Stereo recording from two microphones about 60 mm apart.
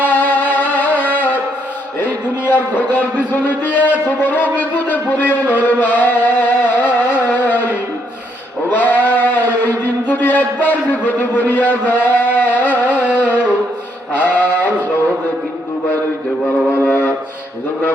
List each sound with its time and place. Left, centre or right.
0.1 s music: left
2.0 s speech: left
4.2 s wind instrument: left
5.6 s music: left
8.7 s sheep: left
13.1 s music: left
14.1 s a sound: left
16.8 s wind instrument: left